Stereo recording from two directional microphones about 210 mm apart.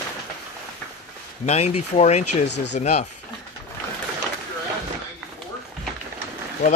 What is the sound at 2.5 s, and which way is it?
Speech, 55° left (ahead or behind).